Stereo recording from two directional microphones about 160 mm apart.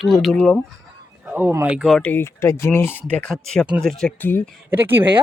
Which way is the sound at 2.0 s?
15° left (ahead or behind).